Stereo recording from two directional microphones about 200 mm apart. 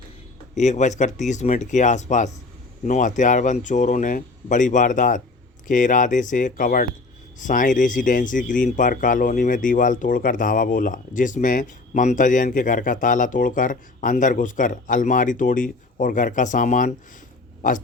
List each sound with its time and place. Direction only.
0.5 s speech: 35° left (ahead or behind)